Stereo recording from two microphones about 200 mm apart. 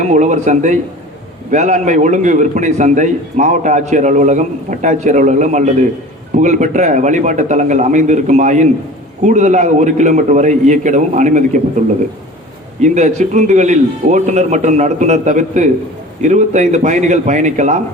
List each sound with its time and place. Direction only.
0.0 s a man's voice: 35° right (ahead or behind)
12.8 s a man's voice: 35° right (ahead or behind)